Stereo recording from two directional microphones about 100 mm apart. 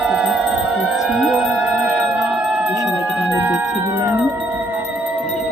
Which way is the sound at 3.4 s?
20° right (ahead or behind).